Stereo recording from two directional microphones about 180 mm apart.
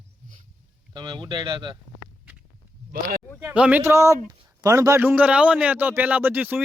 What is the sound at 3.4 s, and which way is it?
A man's voice, 10° right (ahead or behind).